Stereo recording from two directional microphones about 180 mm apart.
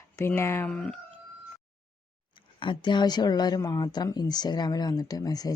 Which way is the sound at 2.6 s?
25° left (ahead or behind).